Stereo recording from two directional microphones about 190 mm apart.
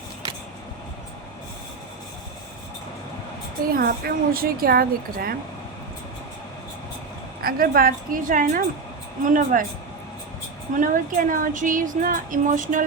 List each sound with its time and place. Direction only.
3.7 s a woman's voice: 50° right (ahead or behind)
7.4 s a woman's voice: 50° right (ahead or behind)
10.8 s a woman's voice: 45° right (ahead or behind)